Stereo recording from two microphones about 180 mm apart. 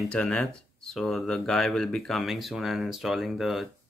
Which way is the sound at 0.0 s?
Centre (ahead or behind).